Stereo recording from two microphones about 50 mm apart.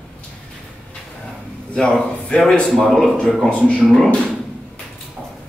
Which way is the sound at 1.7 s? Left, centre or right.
Centre.